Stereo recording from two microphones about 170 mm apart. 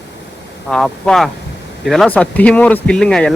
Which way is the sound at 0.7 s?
5° left (ahead or behind).